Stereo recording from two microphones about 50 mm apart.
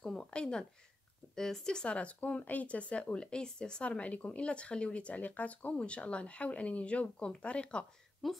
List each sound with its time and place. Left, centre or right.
0.0 s a sound: centre
0.3 s speech: centre
4.0 s speech: left
8.2 s a woman's voice: centre